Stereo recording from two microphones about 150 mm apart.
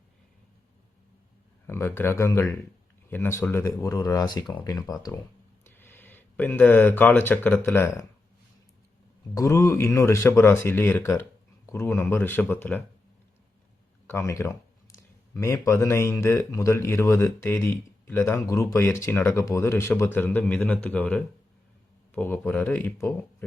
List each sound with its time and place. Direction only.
1.6 s speech: 15° left (ahead or behind)
5.6 s speech: 15° left (ahead or behind)
9.3 s speech: 20° left (ahead or behind)
14.1 s speech: 20° left (ahead or behind)